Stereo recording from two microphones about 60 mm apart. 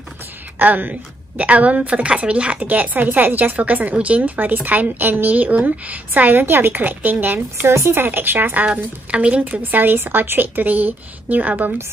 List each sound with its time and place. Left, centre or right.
0.6 s a woman's voice: right
7.7 s speech: right
8.0 s speech: right